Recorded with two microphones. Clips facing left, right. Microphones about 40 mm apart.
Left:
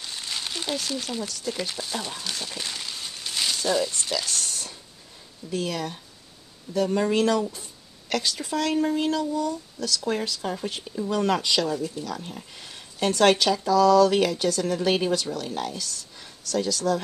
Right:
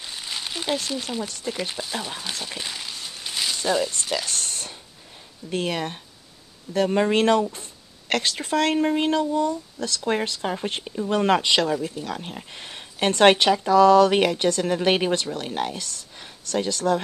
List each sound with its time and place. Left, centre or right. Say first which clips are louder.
0.0 s a sound: right 1 dB; centre
1.2 s speech: right 1 dB; right
1.5 s speech: right 1 dB; centre
4.1 s speech: right 1 dB; right